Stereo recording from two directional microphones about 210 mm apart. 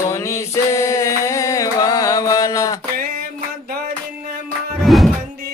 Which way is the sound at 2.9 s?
45° right (ahead or behind).